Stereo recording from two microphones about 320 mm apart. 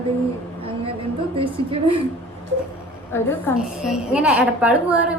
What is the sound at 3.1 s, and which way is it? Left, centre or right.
A woman's voice, centre.